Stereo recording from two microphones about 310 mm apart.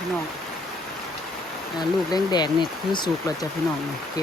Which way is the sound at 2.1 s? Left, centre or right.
Centre.